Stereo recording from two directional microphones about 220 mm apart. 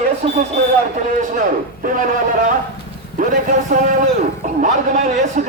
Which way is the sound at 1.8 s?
40° right (ahead or behind).